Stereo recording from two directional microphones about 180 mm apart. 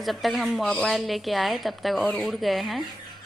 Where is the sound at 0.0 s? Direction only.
Centre (ahead or behind).